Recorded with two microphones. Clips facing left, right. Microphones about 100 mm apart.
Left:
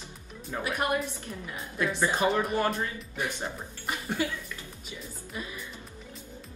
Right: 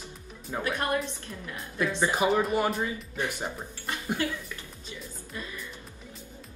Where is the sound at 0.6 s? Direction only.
15° left (ahead or behind).